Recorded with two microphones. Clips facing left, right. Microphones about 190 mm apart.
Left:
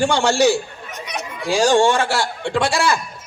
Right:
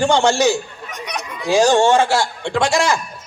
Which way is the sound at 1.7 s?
15° left (ahead or behind).